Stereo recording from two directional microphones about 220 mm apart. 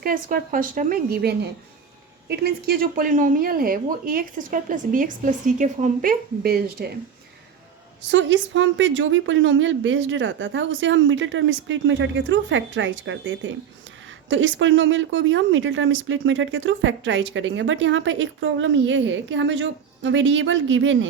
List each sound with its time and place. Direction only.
0.0 s speech: 40° right (ahead or behind)
8.1 s speech: 55° right (ahead or behind)